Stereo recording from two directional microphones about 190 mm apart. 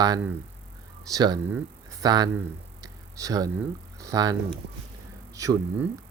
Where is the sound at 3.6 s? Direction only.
15° right (ahead or behind).